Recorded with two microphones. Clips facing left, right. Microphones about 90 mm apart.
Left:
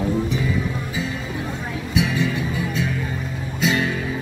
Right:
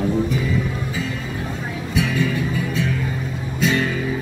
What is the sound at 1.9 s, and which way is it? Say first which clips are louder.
Music: right 1 dB; 10° left (ahead or behind).